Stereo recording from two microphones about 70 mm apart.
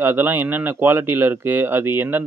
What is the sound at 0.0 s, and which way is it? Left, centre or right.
Speech, right.